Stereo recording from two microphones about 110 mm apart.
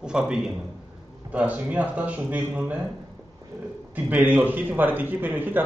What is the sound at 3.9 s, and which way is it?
A man's voice, 15° right (ahead or behind).